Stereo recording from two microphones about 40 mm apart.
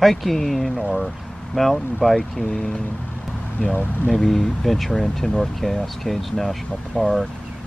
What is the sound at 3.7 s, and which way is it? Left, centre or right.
Speech, left.